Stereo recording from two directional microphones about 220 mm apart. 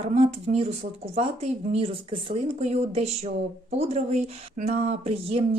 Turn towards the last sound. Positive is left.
turn(degrees=-25)  # may be behind; listen again after turning